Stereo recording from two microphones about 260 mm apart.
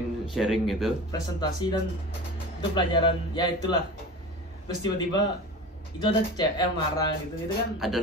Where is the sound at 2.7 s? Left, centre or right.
Centre.